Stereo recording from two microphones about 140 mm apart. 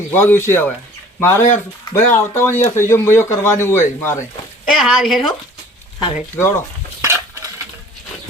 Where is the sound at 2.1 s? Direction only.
15° left (ahead or behind).